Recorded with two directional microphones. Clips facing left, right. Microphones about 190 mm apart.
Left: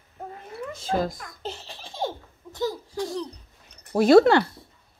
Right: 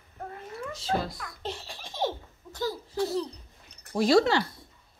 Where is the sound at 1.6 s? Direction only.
15° right (ahead or behind).